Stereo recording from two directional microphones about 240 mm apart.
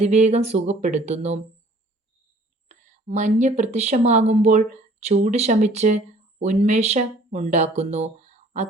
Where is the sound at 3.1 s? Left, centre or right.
Right.